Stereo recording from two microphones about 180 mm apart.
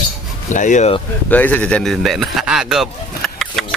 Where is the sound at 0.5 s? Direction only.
45° left (ahead or behind).